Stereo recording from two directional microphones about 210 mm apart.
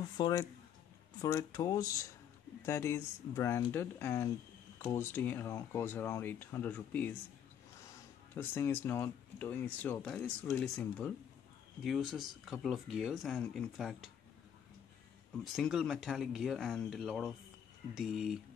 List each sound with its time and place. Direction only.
0.2 s speech: 15° left (ahead or behind)
8.4 s speech: 10° left (ahead or behind)
15.5 s speech: centre (ahead or behind)